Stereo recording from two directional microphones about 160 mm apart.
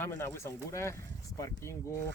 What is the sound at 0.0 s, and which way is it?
Speech, 15° left (ahead or behind).